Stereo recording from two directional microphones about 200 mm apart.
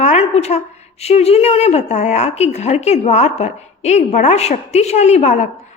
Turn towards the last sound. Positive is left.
turn(degrees=35)  # may be behind; listen again after turning